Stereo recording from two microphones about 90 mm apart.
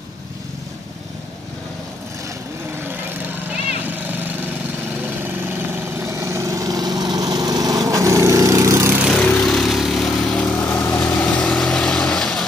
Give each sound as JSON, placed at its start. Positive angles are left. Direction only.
{"t": 3.9, "sound": "lawn mower", "side_deg": -20}
{"t": 5.2, "sound": "vehicle", "side_deg": -25}
{"t": 9.1, "sound": "lawn mower", "side_deg": 10}
{"t": 10.3, "sound": "vehicle", "side_deg": 15}
{"t": 10.6, "sound": "vehicle", "side_deg": 25}